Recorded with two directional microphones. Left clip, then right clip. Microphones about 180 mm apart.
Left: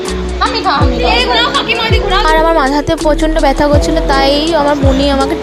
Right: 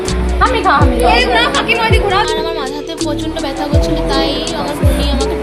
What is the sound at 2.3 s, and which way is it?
Speech, 50° left (ahead or behind).